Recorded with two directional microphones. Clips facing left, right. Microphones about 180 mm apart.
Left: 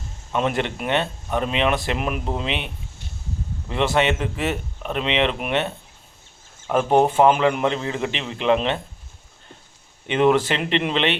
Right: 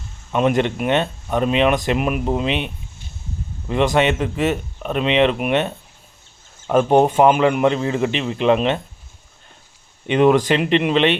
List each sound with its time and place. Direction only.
0.3 s speech: 15° right (ahead or behind)
3.7 s speech: 15° right (ahead or behind)
6.7 s speech: 20° right (ahead or behind)
10.1 s speech: 15° right (ahead or behind)